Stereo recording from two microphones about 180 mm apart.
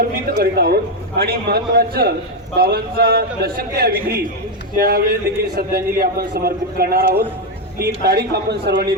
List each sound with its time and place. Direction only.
0.3 s a man's voice: 60° right (ahead or behind)